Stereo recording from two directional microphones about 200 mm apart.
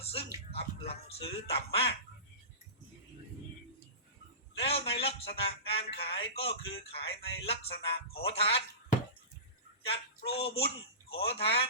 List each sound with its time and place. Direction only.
0.0 s speech: 30° left (ahead or behind)
4.5 s a man's voice: 30° left (ahead or behind)
9.8 s speech: 30° left (ahead or behind)